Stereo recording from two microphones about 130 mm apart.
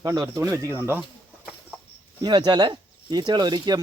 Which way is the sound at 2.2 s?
35° right (ahead or behind).